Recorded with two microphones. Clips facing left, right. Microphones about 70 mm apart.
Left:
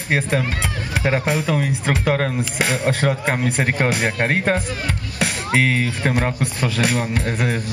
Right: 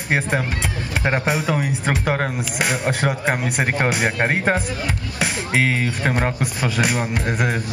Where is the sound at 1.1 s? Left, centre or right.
Centre.